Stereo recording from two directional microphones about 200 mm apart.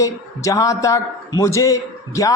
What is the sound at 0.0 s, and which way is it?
A man's voice, 15° left (ahead or behind).